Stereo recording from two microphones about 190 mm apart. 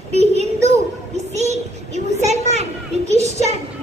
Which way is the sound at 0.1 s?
35° right (ahead or behind).